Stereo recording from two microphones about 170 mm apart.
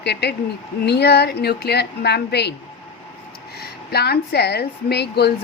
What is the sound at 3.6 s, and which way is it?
A woman's voice, 70° left (ahead or behind).